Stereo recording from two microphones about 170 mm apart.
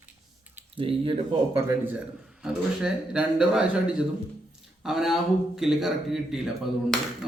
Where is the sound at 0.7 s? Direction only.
35° right (ahead or behind).